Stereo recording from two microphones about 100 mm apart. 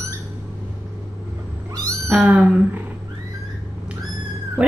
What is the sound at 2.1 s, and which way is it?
Speech, 15° right (ahead or behind).